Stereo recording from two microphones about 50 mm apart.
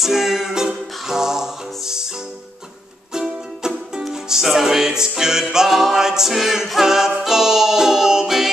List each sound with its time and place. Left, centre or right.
0.0 s music: centre
3.1 s music: centre